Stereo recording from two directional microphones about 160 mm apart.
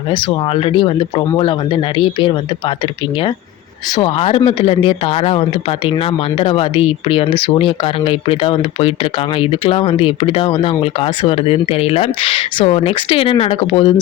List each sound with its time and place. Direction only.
0.1 s speech: 35° left (ahead or behind)
3.9 s speech: 35° left (ahead or behind)